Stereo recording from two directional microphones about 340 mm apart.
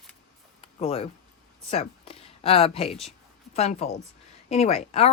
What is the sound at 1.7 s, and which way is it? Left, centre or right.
Speech, centre.